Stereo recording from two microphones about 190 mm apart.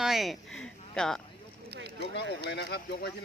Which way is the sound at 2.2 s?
65° left (ahead or behind).